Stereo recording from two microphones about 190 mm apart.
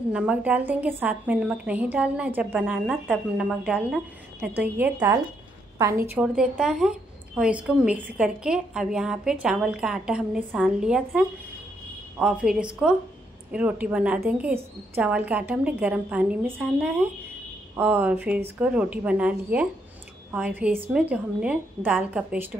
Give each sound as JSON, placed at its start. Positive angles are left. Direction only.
{"t": 0.1, "sound": "a woman's voice", "side_deg": -5}